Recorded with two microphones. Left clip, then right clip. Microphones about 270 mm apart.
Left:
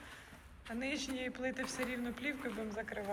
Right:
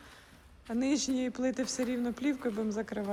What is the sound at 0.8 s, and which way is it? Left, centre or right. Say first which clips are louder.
Speech: right 8 dB; centre.